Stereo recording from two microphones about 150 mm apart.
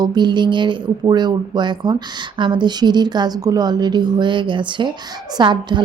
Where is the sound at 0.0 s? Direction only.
30° right (ahead or behind).